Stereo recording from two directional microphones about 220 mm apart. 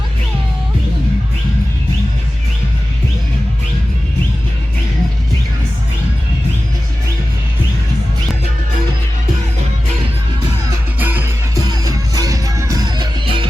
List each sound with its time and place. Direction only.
11.0 s music: 10° right (ahead or behind)